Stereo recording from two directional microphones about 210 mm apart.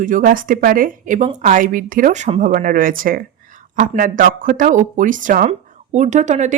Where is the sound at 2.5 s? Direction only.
40° right (ahead or behind).